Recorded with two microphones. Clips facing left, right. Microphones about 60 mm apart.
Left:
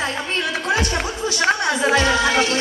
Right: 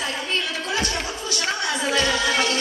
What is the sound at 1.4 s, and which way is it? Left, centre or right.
Music, left.